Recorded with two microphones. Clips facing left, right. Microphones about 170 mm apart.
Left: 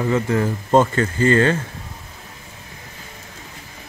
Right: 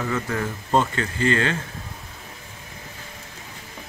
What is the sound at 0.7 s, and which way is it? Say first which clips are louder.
Speech: left 6 dB; 45° left (ahead or behind).